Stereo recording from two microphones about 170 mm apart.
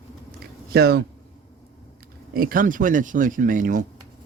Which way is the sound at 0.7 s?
70° right (ahead or behind).